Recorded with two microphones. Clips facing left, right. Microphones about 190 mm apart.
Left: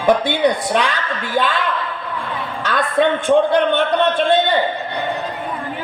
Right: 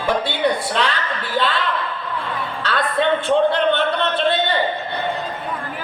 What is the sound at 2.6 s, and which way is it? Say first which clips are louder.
A man's voice: left 3 dB; 15° left (ahead or behind).